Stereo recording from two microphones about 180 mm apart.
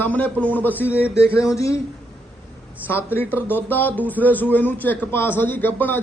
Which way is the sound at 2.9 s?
10° left (ahead or behind).